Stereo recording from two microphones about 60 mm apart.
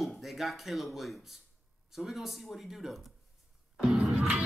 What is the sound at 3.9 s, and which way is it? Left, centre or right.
Music, right.